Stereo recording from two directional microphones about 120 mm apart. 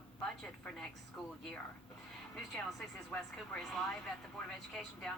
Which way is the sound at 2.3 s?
5° left (ahead or behind).